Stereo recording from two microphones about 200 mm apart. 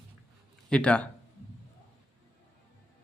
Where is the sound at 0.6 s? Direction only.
5° left (ahead or behind).